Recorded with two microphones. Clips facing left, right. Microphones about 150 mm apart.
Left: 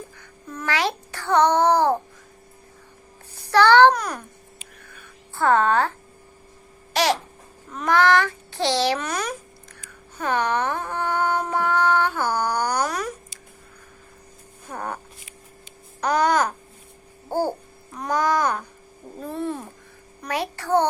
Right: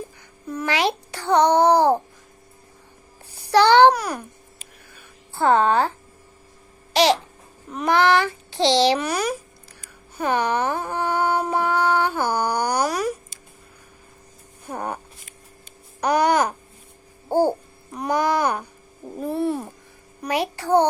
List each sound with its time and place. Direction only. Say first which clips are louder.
0.4 s a child's voice: right 3 dB; 15° right (ahead or behind)
3.3 s a child's voice: right 1 dB; 15° right (ahead or behind)
5.3 s a woman's voice: right 1 dB; 25° right (ahead or behind)
6.9 s babbling: right 4 dB; 20° right (ahead or behind)
7.7 s a sound: right 1 dB; 15° right (ahead or behind)
14.7 s speech: right 2 dB; 15° right (ahead or behind)
16.0 s a sound: right 1 dB; 10° right (ahead or behind)
17.2 s babbling: right 5 dB; 20° right (ahead or behind)
17.9 s a sound: right 1 dB; 10° right (ahead or behind)